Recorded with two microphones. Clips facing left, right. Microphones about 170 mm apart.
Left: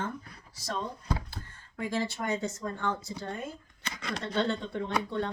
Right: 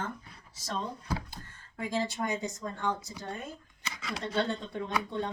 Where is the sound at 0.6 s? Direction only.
20° right (ahead or behind).